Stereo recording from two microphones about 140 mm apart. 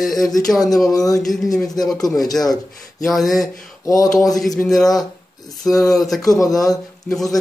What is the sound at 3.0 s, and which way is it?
Speech, centre (ahead or behind).